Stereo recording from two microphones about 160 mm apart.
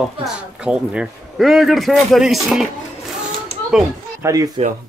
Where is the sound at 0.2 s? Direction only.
5° right (ahead or behind).